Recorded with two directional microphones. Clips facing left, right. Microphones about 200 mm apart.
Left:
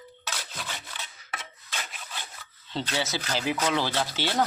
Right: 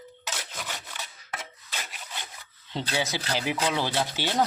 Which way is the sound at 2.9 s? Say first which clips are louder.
Right 2 dB; 15° right (ahead or behind).